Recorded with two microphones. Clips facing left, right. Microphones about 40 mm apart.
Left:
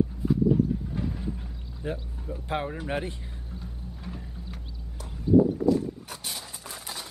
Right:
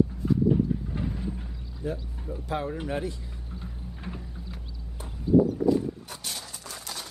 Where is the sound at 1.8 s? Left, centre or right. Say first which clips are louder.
Right 1 dB; left.